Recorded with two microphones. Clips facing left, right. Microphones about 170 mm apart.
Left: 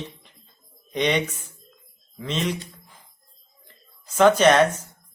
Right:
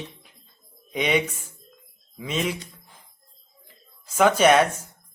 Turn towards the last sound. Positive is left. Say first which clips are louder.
# left 1 dB
turn(degrees=-10)  # may be behind; listen again after turning